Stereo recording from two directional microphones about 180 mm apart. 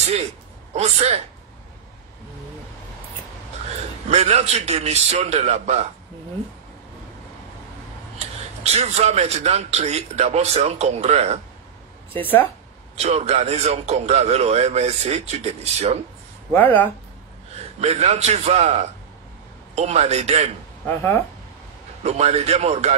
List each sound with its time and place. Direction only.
0.7 s a man's voice: 35° right (ahead or behind)
4.1 s a man's voice: 35° right (ahead or behind)
8.7 s a man's voice: 35° right (ahead or behind)
12.2 s speech: 10° left (ahead or behind)
12.9 s a man's voice: 35° right (ahead or behind)
16.5 s speech: 10° left (ahead or behind)
17.7 s a man's voice: 35° right (ahead or behind)
22.0 s a man's voice: 35° right (ahead or behind)